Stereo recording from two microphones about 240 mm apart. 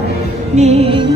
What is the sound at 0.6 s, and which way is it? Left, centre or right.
Music, right.